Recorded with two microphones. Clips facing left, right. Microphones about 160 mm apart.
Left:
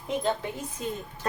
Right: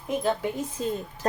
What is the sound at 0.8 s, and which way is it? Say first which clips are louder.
Speech: right 4 dB; 30° right (ahead or behind).